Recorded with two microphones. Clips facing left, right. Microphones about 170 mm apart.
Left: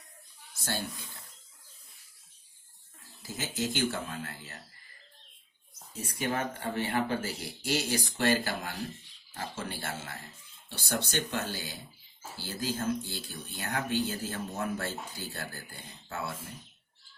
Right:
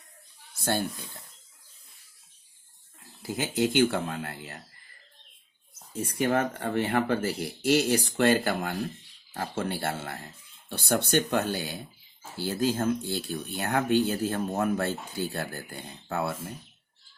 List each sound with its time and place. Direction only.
0.6 s speech: 55° right (ahead or behind)
3.2 s speech: 60° right (ahead or behind)
6.0 s speech: 60° right (ahead or behind)